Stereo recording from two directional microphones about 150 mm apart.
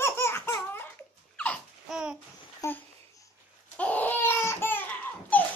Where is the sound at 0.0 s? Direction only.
15° left (ahead or behind).